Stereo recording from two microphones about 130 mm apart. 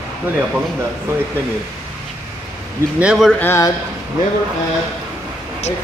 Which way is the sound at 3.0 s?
5° right (ahead or behind).